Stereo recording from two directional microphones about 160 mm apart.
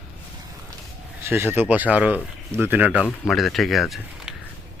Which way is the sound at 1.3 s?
15° right (ahead or behind).